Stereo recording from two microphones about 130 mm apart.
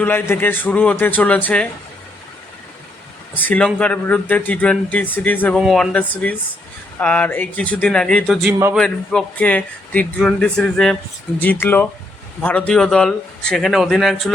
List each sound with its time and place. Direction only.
0.0 s speech: 15° left (ahead or behind)
3.3 s speech: 10° left (ahead or behind)
5.5 s a man's voice: centre (ahead or behind)
11.6 s a man's voice: 15° left (ahead or behind)